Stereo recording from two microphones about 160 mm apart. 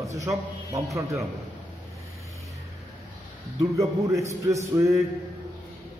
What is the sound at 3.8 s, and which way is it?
A man's voice, 20° right (ahead or behind).